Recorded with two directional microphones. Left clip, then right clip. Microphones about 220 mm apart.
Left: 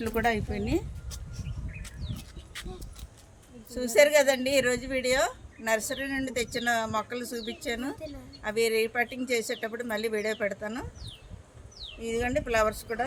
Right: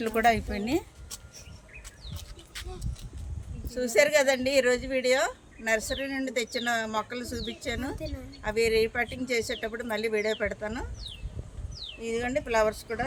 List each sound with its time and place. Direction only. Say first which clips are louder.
0.0 s speech: right 4 dB; 50° right (ahead or behind)
2.5 s a sound: even; centre (ahead or behind)
3.7 s speech: left 2 dB; 5° right (ahead or behind)
11.9 s speech: left 1 dB; 5° right (ahead or behind)